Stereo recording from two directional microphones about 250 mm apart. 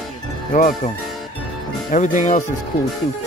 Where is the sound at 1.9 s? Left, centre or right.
Left.